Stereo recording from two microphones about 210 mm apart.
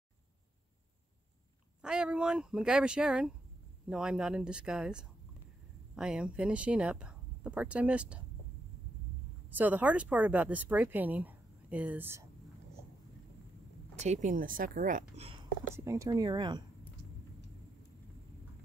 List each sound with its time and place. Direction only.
1.8 s speech: 5° right (ahead or behind)
9.5 s speech: 10° right (ahead or behind)
13.9 s speech: 35° right (ahead or behind)
15.7 s speech: 15° right (ahead or behind)